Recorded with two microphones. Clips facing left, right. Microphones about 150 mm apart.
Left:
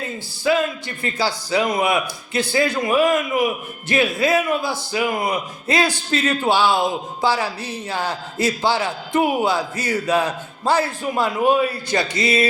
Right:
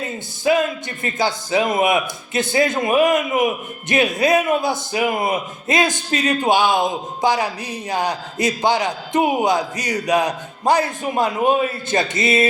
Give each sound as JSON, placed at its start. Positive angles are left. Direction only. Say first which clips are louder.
{"t": 0.4, "sound": "a man's voice", "louder": "right 2 dB", "side_deg": -20}